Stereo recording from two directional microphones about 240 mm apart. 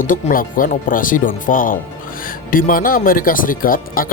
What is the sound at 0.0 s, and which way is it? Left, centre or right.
Speech, left.